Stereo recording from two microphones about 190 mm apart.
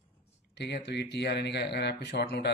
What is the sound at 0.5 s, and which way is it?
A man's voice, 60° left (ahead or behind).